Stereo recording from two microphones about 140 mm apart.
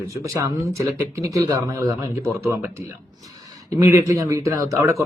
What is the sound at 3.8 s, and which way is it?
Speech, 20° right (ahead or behind).